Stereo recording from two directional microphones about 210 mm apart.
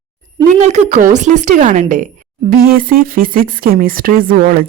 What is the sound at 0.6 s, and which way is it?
A woman's voice, 35° right (ahead or behind).